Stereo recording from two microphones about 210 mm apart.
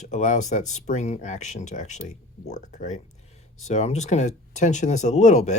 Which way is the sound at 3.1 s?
30° left (ahead or behind).